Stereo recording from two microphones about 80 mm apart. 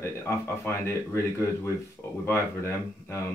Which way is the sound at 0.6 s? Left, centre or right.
Left.